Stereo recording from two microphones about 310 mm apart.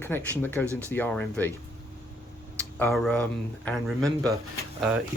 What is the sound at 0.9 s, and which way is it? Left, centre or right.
Speech, centre.